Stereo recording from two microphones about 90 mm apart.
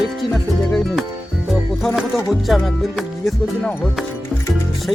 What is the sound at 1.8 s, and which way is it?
Music, 5° left (ahead or behind).